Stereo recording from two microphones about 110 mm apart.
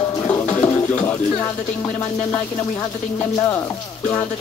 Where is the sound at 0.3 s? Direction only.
15° left (ahead or behind).